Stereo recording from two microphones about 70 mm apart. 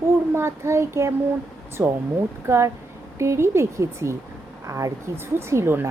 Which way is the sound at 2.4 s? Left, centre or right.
Right.